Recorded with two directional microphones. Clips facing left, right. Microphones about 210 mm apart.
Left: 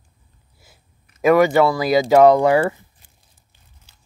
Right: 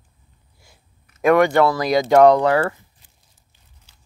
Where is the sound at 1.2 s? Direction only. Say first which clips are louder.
Left 1 dB; 5° left (ahead or behind).